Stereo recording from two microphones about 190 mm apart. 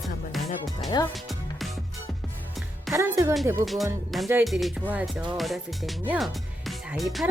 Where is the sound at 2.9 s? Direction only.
15° right (ahead or behind).